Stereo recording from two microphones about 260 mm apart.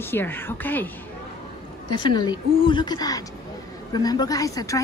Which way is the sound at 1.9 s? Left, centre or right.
Centre.